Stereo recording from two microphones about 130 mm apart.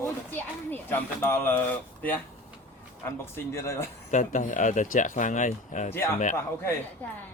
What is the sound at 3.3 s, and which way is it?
Speech, 20° left (ahead or behind).